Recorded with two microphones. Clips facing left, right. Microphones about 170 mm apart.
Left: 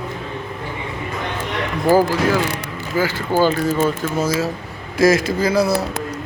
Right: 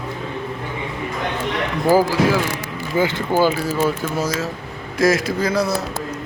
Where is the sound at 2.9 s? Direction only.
20° right (ahead or behind).